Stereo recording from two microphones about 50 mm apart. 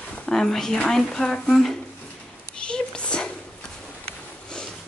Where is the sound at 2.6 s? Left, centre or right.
Centre.